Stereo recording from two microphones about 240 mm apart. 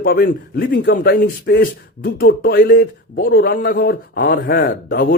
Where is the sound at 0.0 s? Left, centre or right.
Left.